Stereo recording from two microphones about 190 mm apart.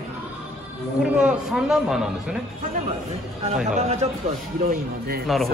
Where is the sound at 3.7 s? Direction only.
35° right (ahead or behind).